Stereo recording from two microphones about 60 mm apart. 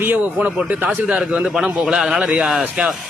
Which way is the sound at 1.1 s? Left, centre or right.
Centre.